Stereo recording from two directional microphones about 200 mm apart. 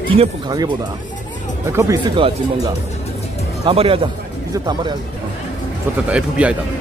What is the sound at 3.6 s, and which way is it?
Speech, 30° right (ahead or behind).